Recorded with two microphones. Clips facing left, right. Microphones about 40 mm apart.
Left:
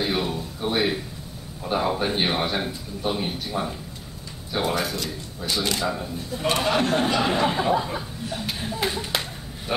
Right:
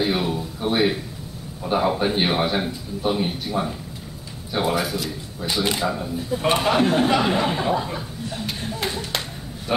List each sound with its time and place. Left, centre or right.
0.0 s a sound: centre
1.6 s a man's voice: centre
5.5 s speech: centre
5.9 s a man's voice: centre